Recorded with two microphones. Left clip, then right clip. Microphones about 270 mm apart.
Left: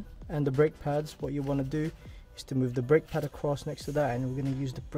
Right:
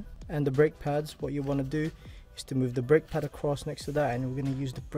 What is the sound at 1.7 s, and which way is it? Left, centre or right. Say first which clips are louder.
Speech: right 1 dB; centre.